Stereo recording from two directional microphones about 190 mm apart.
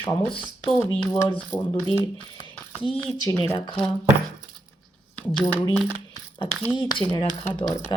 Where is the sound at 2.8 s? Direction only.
25° left (ahead or behind).